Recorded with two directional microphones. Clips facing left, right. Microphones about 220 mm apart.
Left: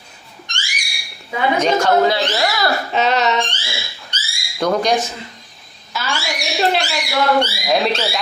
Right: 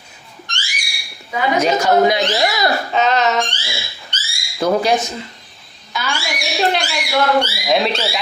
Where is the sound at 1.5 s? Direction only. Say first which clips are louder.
Right 1 dB; 10° right (ahead or behind).